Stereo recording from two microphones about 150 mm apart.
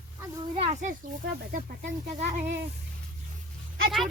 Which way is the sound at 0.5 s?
45° right (ahead or behind).